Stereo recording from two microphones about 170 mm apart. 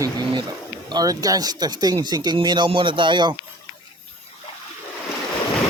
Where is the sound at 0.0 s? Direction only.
25° right (ahead or behind).